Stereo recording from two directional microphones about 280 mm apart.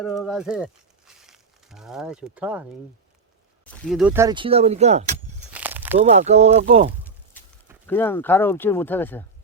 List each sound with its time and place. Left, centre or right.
0.0 s speech: centre
3.7 s speech: centre; by 5.1 s right
5.5 s a sound: centre
6.0 s speech: right
7.3 s a sound: centre
7.9 s speech: centre